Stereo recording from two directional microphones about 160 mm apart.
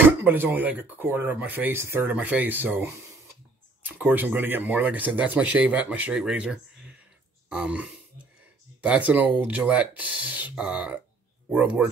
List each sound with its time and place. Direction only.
0.0 s speech: 10° right (ahead or behind)
7.4 s grunt: 5° right (ahead or behind)
8.8 s speech: 10° right (ahead or behind)